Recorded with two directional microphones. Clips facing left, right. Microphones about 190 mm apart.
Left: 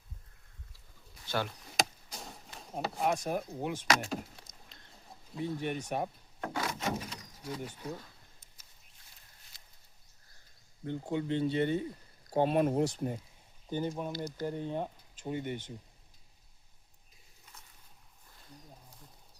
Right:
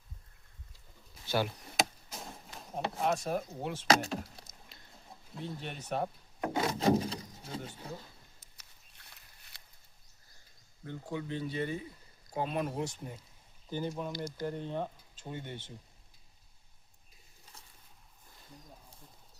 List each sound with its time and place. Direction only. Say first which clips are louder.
1.3 s chop: right 3 dB; 5° right (ahead or behind)
3.1 s speech: even; 10° left (ahead or behind)
3.8 s speech: right 4 dB; 30° right (ahead or behind)
5.4 s speech: left 7 dB; 15° left (ahead or behind)
6.4 s a sound: right 6 dB; 20° right (ahead or behind)
8.5 s a sound: right 2 dB; 70° right (ahead or behind)
10.8 s speech: left 5 dB; 25° left (ahead or behind)
13.7 s speech: left 2 dB; 15° left (ahead or behind)